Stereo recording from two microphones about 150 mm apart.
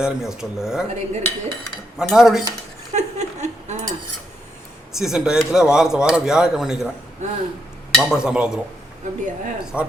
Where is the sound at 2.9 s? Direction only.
50° right (ahead or behind).